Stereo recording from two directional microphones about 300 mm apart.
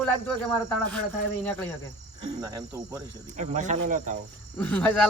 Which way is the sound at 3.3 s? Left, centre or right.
Right.